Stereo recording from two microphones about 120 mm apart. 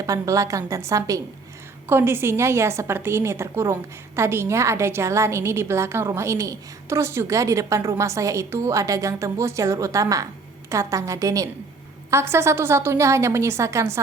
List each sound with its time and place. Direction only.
0.0 s a woman's voice: 25° right (ahead or behind)